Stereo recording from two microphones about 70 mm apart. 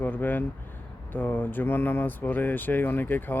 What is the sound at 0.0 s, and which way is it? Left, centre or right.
Speech, left.